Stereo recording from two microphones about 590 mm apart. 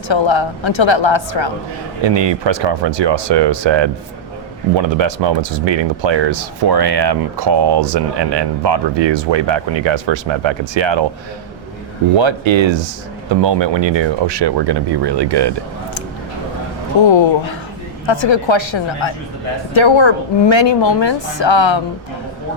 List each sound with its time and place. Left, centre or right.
0.1 s a woman's voice: left
2.0 s speech: right
12.1 s speech: right
17.0 s a woman's voice: left